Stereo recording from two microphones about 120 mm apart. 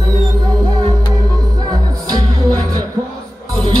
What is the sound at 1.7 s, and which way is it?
Music, 35° right (ahead or behind).